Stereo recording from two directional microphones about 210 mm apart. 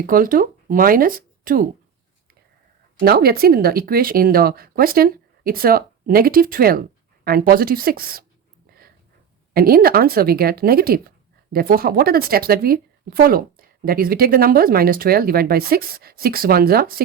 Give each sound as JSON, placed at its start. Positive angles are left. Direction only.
{"t": 0.0, "sound": "speech", "side_deg": -40}
{"t": 3.0, "sound": "speech", "side_deg": -45}
{"t": 9.5, "sound": "speech", "side_deg": -45}